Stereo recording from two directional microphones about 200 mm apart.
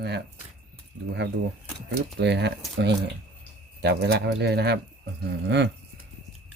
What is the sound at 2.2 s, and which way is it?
Speech, 55° right (ahead or behind).